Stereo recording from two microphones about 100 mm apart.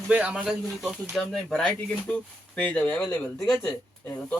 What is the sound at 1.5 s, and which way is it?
Speech, 5° left (ahead or behind).